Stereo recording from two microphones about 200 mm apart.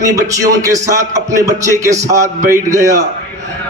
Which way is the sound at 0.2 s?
15° right (ahead or behind).